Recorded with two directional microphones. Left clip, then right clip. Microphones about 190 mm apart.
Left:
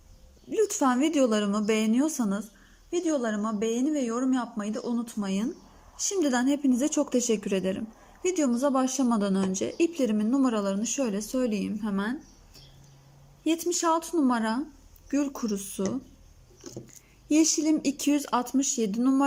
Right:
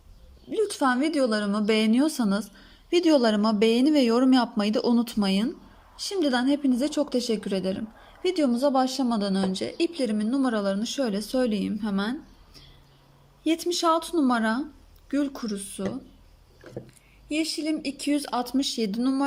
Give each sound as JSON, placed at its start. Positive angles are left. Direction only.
{"t": 0.5, "sound": "speech", "side_deg": 10}
{"t": 13.4, "sound": "speech", "side_deg": 5}
{"t": 17.2, "sound": "speech", "side_deg": 25}